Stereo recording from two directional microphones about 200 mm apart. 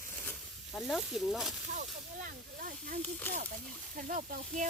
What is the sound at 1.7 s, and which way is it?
Speech, 40° right (ahead or behind).